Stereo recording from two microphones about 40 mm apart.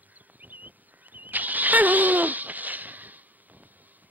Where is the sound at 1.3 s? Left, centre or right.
Right.